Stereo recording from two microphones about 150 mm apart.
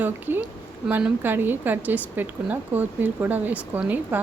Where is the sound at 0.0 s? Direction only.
15° right (ahead or behind).